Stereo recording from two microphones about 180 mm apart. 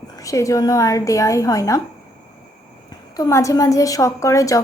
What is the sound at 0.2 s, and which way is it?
Speech, 20° left (ahead or behind).